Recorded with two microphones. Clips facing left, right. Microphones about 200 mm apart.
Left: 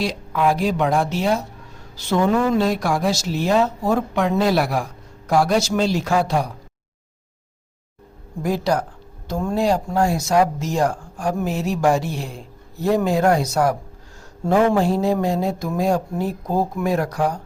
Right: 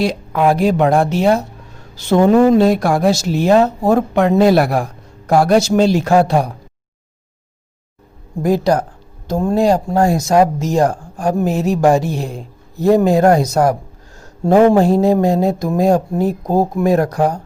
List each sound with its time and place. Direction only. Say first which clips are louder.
0.0 s speech: right 5 dB; 55° right (ahead or behind)
8.4 s speech: right 6 dB; 45° right (ahead or behind)